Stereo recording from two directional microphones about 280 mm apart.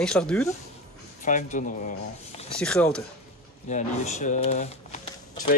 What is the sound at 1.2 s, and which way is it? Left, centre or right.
Speech, left.